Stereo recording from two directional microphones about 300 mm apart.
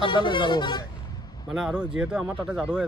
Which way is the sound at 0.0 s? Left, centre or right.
Centre.